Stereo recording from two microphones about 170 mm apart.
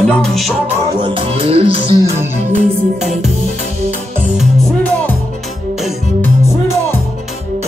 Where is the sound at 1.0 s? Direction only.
30° right (ahead or behind).